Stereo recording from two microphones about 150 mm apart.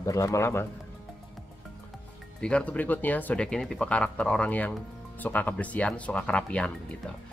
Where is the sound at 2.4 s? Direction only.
5° left (ahead or behind).